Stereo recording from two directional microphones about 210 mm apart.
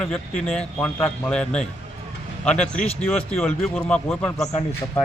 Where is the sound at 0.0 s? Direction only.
5° left (ahead or behind).